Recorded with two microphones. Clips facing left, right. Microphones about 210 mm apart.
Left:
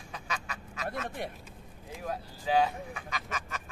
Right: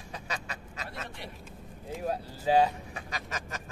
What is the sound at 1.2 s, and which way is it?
Speech, 50° left (ahead or behind).